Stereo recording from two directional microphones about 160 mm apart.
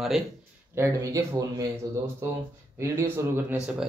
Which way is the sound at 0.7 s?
20° right (ahead or behind).